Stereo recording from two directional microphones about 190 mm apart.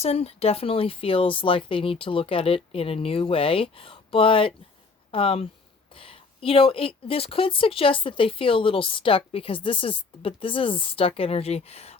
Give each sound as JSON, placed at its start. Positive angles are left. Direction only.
{"t": 0.0, "sound": "a woman's voice", "side_deg": 30}